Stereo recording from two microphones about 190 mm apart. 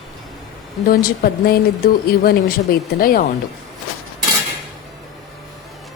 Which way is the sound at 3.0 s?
50° left (ahead or behind).